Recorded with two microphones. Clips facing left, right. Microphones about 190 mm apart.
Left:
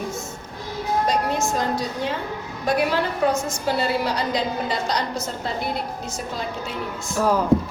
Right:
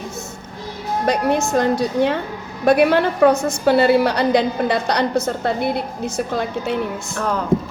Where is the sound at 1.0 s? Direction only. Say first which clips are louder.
Right 8 dB; 65° right (ahead or behind).